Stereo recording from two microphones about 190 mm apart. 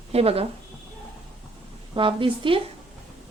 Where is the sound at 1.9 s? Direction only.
25° right (ahead or behind).